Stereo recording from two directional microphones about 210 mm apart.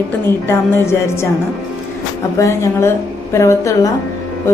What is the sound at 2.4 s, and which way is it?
A woman's voice, 15° left (ahead or behind).